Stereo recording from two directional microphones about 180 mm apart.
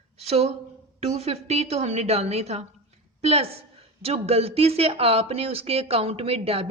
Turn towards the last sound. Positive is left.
turn(degrees=-30)  # may be behind; listen again after turning